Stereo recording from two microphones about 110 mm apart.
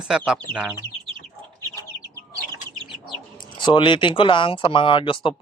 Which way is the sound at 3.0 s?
45° left (ahead or behind).